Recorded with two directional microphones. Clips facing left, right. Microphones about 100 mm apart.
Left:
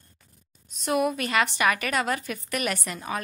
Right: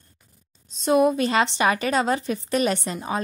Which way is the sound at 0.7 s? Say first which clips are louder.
Right 6 dB; 25° right (ahead or behind).